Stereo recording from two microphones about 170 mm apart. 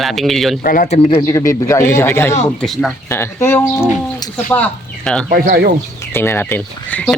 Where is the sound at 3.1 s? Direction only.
15° left (ahead or behind).